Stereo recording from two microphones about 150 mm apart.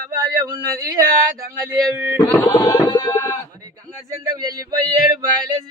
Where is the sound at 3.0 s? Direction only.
15° left (ahead or behind).